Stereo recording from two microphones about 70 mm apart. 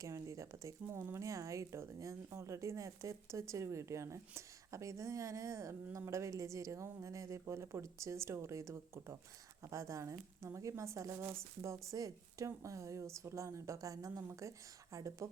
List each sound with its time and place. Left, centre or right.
0.0 s speech: right
11.9 s speech: right